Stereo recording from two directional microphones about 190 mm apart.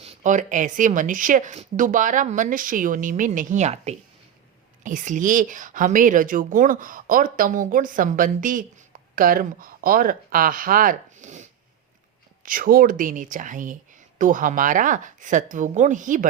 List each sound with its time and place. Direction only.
0.0 s a woman's voice: 35° right (ahead or behind)